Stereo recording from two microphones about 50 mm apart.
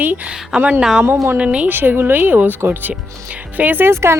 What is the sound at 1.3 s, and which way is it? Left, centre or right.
Speech, right.